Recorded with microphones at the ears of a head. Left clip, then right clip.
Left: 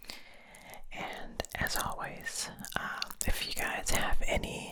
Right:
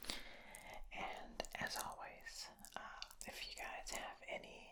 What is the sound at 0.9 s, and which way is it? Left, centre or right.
Whispering, left.